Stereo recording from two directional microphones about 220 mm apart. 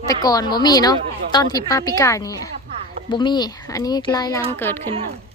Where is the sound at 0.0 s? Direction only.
15° left (ahead or behind).